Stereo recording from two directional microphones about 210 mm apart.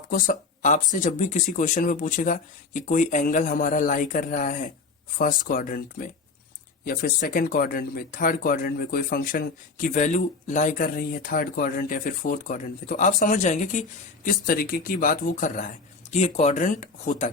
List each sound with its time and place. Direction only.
0.1 s speech: 40° left (ahead or behind)